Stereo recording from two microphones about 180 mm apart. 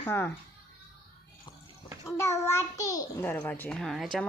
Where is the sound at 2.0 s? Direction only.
15° left (ahead or behind).